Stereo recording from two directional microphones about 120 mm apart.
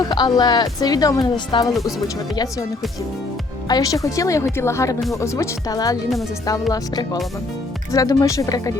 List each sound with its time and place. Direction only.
0.0 s a woman's voice: 35° left (ahead or behind)
3.7 s a woman's voice: 30° left (ahead or behind)